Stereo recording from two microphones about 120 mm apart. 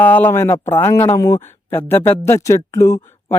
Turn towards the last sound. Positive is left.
turn(degrees=25)  # may be behind; listen again after turning